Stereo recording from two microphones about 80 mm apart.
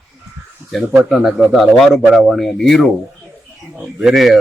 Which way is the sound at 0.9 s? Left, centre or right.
Centre.